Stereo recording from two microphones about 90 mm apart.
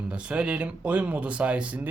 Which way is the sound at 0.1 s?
10° right (ahead or behind).